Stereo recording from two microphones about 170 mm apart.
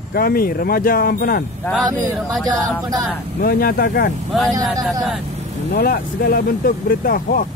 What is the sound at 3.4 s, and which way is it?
Speech, 60° left (ahead or behind).